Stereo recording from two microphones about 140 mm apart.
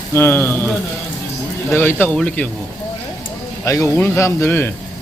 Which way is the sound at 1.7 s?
15° left (ahead or behind).